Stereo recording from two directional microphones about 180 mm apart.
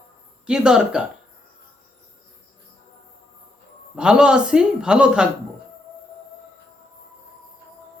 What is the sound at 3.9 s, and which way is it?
Speech, 5° right (ahead or behind).